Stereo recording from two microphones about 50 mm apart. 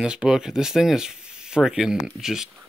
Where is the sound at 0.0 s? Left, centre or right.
Centre.